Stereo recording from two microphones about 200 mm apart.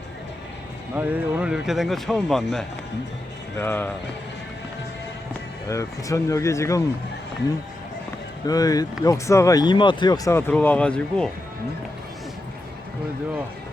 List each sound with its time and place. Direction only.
0.9 s speech: 10° right (ahead or behind); by 3.9 s 10° left (ahead or behind)
5.6 s speech: 15° left (ahead or behind)
8.4 s speech: 20° left (ahead or behind)
10.5 s speech: 5° left (ahead or behind)